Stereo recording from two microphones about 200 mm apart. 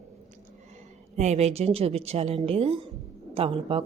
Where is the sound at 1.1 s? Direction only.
35° right (ahead or behind).